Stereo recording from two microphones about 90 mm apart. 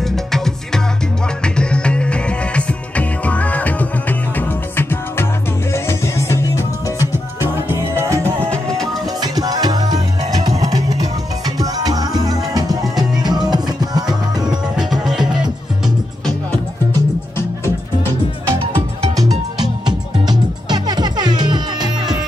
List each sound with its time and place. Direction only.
1.4 s music: 10° left (ahead or behind); by 6.6 s 35° left (ahead or behind)
7.0 s music: 30° right (ahead or behind)
8.2 s music: 15° left (ahead or behind)
9.2 s music: 45° right (ahead or behind)
14.8 s music: 5° right (ahead or behind)
18.8 s music: 45° right (ahead or behind)